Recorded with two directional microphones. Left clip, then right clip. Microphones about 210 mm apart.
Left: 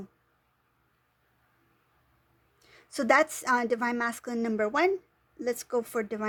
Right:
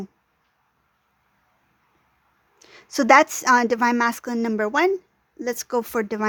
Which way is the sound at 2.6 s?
30° right (ahead or behind).